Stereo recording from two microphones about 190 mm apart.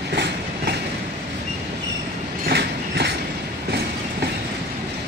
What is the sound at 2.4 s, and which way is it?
Train, 60° right (ahead or behind).